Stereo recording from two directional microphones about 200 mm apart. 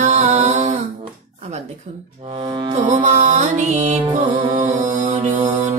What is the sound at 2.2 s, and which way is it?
Music, 25° right (ahead or behind).